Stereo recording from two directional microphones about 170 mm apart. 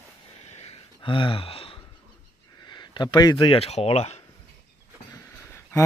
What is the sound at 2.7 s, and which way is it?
Speech, 25° left (ahead or behind).